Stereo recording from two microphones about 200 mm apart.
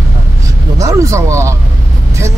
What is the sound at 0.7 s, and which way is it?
Speech, 15° right (ahead or behind).